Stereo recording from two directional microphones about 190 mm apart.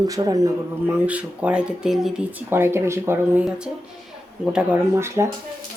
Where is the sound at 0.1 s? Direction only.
20° right (ahead or behind).